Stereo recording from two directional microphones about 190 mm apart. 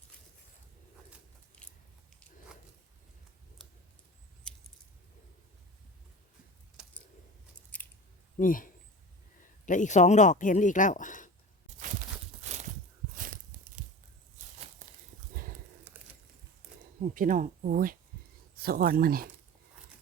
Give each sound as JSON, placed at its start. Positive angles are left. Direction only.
{"t": 6.8, "sound": "typing", "side_deg": -5}
{"t": 8.4, "sound": "speech", "side_deg": 45}
{"t": 12.4, "sound": "a sound", "side_deg": -40}
{"t": 15.3, "sound": "horse", "side_deg": -45}
{"t": 15.9, "sound": "a sound", "side_deg": -10}
{"t": 17.0, "sound": "speech", "side_deg": -45}